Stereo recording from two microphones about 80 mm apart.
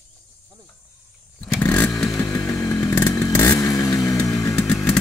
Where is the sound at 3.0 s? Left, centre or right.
Left.